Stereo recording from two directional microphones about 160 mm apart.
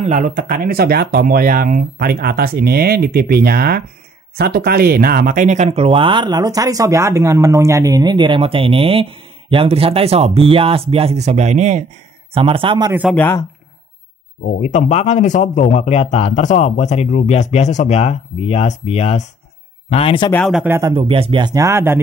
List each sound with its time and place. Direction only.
0.0 s speech: 55° right (ahead or behind)
12.4 s speech: 35° right (ahead or behind)
13.1 s speech: 15° left (ahead or behind)
14.4 s speech: 45° left (ahead or behind)
20.6 s speech: 15° right (ahead or behind)
20.9 s speech: 35° right (ahead or behind); by 22.0 s 15° right (ahead or behind)